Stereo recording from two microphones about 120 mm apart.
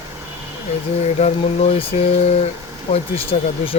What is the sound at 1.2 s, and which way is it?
Speech, 55° left (ahead or behind).